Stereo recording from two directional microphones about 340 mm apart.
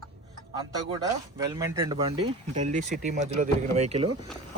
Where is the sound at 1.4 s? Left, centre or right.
Centre.